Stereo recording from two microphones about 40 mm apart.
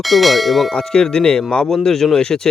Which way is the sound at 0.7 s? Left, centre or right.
Centre.